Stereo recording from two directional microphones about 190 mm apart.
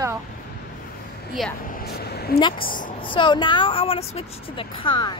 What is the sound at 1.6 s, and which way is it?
A woman's voice, 50° left (ahead or behind).